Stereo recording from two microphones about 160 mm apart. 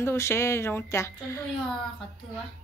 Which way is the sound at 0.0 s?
15° left (ahead or behind).